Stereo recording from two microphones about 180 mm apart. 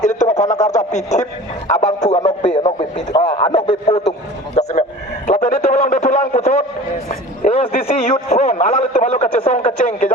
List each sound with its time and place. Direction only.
0.0 s a sound: 40° left (ahead or behind)
1.7 s speech: 40° left (ahead or behind)
2.6 s radio: 30° left (ahead or behind)
3.9 s speech: 40° left (ahead or behind)
4.5 s a sound: 40° left (ahead or behind)
7.1 s a man's voice: 35° left (ahead or behind)
9.5 s radio: 45° left (ahead or behind)